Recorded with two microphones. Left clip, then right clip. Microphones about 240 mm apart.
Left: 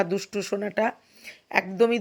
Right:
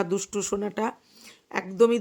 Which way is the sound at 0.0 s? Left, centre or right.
Centre.